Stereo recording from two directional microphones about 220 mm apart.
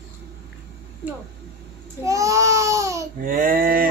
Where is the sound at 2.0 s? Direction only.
15° right (ahead or behind).